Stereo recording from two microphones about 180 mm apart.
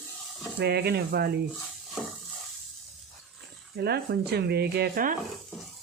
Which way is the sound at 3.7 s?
65° right (ahead or behind).